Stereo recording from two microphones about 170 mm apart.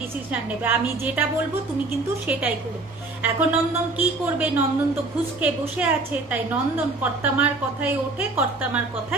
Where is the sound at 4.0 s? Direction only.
10° right (ahead or behind).